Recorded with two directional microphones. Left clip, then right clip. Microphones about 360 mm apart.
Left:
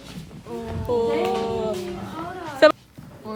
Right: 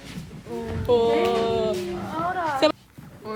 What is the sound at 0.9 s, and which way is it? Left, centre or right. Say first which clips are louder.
Speech: right 3 dB; centre.